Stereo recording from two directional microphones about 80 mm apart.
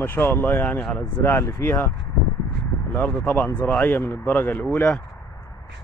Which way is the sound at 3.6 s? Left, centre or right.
Centre.